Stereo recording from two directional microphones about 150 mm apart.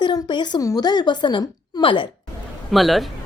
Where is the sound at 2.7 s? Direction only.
Centre (ahead or behind).